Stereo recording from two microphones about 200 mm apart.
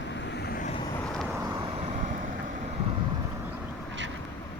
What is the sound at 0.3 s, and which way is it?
Vehicle, 55° left (ahead or behind).